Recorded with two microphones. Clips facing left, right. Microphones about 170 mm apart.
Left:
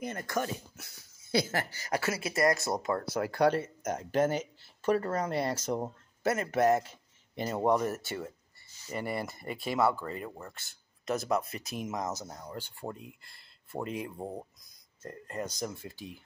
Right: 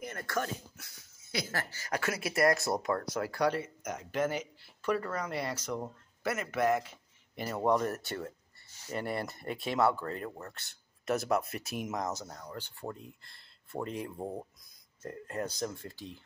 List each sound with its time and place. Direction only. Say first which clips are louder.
0.0 s speech: left 2 dB; 20° left (ahead or behind)
2.2 s speech: right 1 dB; centre (ahead or behind)
2.8 s speech: left 1 dB; 25° left (ahead or behind)
3.5 s speech: left 4 dB; 45° left (ahead or behind)
4.1 s speech: left 4 dB; 30° left (ahead or behind)
6.2 s speech: left 4 dB; 40° left (ahead or behind)
7.3 s speech: left 1 dB; 20° left (ahead or behind); by 12.1 s centre (ahead or behind)
12.2 s speech: left 2 dB; 15° left (ahead or behind)